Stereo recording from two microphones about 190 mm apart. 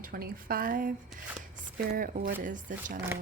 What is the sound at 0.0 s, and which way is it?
Speech, 50° right (ahead or behind).